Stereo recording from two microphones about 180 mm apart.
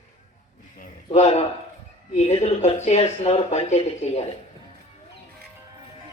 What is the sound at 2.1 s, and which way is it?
Speech, 40° left (ahead or behind).